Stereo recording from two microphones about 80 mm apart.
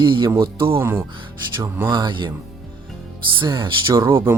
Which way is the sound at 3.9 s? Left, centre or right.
Right.